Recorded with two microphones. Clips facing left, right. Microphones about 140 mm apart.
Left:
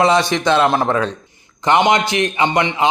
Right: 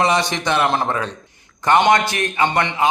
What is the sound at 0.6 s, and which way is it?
Speech, 10° left (ahead or behind).